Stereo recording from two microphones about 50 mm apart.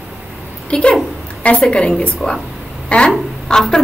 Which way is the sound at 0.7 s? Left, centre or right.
Left.